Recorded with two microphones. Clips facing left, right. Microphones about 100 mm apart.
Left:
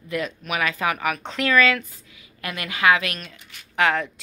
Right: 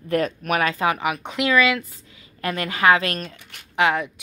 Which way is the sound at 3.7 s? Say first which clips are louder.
Right 1 dB; 20° right (ahead or behind).